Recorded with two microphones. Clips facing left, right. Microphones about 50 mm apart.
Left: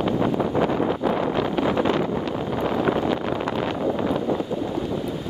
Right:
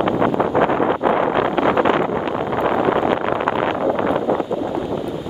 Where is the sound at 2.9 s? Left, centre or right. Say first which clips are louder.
Right 5 dB; right.